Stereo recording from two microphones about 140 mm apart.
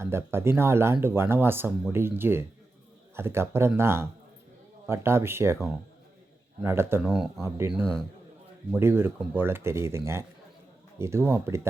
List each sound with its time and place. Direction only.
0.0 s speech: 20° right (ahead or behind)
6.6 s speech: 15° right (ahead or behind)
7.0 s speech: centre (ahead or behind)
8.7 s speech: 15° right (ahead or behind)